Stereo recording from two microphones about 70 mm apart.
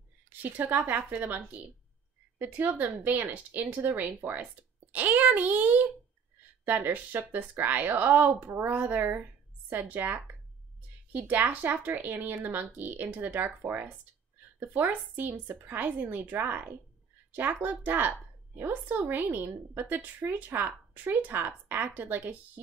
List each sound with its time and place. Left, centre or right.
0.3 s a woman's voice: right